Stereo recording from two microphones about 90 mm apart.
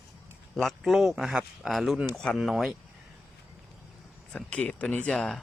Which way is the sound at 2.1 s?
5° left (ahead or behind).